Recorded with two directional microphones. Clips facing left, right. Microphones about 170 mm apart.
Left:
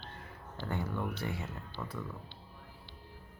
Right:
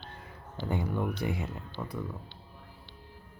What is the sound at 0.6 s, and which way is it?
Speech, 15° right (ahead or behind).